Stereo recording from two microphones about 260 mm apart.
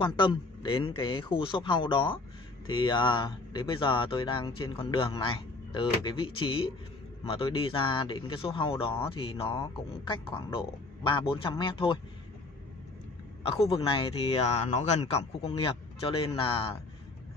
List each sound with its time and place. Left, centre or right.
0.0 s speech: centre
13.4 s speech: left